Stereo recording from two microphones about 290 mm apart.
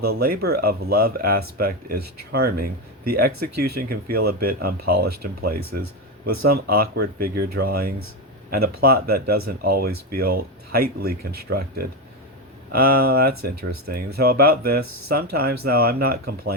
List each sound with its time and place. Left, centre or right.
0.0 s speech: right
6.5 s speech: right
11.2 s speech: right
11.4 s speech: right